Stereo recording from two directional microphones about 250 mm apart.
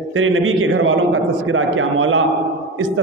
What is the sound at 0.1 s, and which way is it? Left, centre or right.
A man's voice, right.